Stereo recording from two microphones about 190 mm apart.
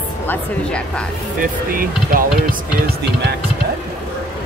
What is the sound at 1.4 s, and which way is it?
Speech, 50° right (ahead or behind).